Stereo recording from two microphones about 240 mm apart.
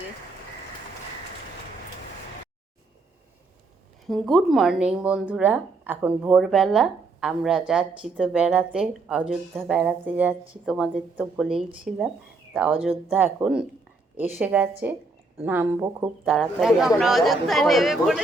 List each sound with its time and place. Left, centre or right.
4.1 s a woman's voice: centre